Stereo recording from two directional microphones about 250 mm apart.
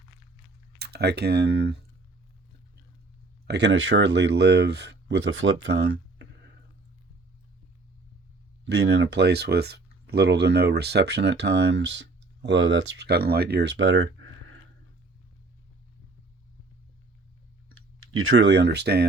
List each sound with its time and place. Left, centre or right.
0.8 s speech: right
3.4 s speech: right
8.7 s speech: right
18.1 s speech: right